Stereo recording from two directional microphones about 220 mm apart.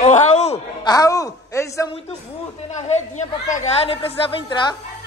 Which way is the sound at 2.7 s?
30° left (ahead or behind).